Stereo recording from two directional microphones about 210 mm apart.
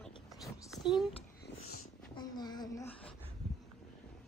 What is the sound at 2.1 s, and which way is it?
Speech, 20° left (ahead or behind).